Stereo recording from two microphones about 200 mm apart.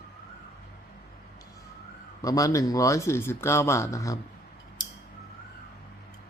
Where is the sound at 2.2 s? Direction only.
15° left (ahead or behind).